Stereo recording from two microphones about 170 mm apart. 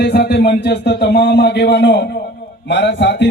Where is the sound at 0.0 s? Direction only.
75° left (ahead or behind).